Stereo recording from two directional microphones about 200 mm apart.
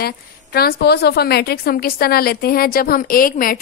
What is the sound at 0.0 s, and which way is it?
A woman's voice, 50° left (ahead or behind).